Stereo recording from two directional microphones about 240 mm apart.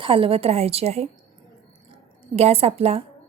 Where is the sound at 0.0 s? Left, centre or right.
Right.